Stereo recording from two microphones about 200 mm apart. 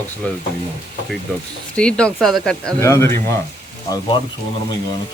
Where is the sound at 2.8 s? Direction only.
15° left (ahead or behind).